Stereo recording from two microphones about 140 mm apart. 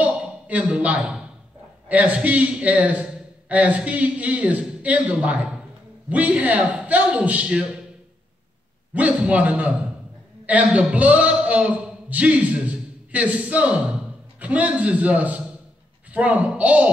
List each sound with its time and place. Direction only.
0.0 s a sound: 10° right (ahead or behind)
1.9 s a man's voice: 10° right (ahead or behind)
8.9 s a man's voice: 10° right (ahead or behind)